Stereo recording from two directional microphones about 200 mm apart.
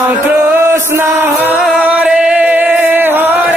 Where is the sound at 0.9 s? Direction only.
10° right (ahead or behind).